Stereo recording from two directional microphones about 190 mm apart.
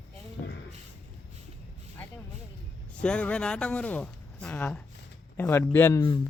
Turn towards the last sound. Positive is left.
turn(degrees=20)  # may be behind; listen again after turning